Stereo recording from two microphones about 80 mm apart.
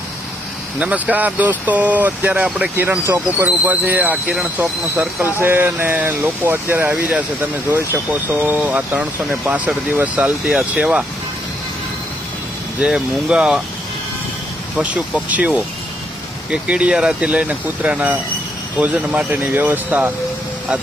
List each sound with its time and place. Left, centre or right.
0.8 s speech: centre
8.3 s speech: right
12.8 s speech: centre
14.8 s speech: centre